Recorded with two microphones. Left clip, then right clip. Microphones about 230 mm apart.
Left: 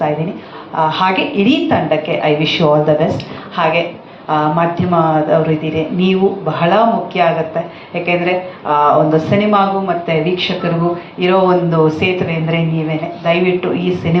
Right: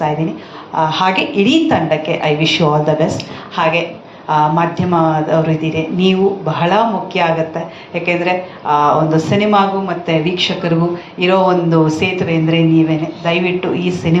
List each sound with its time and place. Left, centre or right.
0.8 s a woman's voice: right